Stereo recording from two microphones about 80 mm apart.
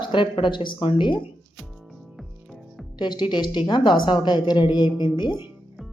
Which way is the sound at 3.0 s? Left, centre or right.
Left.